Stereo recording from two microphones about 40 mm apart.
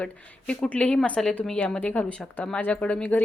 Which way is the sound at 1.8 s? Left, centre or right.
Left.